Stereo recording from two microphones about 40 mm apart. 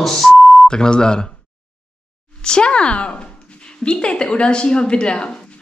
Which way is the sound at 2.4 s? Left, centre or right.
Left.